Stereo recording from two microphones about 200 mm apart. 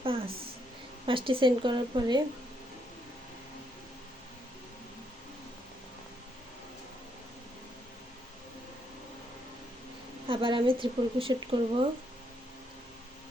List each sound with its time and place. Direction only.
0.0 s a sound: 30° right (ahead or behind)
1.0 s speech: 25° right (ahead or behind)
10.2 s speech: 25° right (ahead or behind)